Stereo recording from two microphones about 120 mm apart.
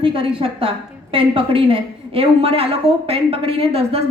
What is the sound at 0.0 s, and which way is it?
A woman's voice, 50° right (ahead or behind).